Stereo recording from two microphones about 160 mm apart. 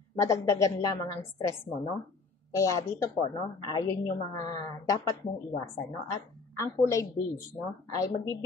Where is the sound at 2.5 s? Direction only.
20° left (ahead or behind).